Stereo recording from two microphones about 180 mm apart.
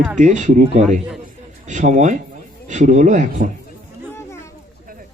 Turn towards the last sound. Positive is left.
turn(degrees=15)  # may be behind; listen again after turning